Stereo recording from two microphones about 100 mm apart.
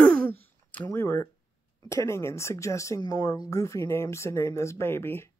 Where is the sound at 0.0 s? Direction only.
15° left (ahead or behind).